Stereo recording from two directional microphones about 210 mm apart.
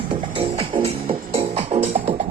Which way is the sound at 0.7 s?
25° right (ahead or behind).